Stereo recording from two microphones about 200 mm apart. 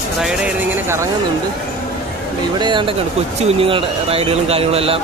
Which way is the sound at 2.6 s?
25° right (ahead or behind).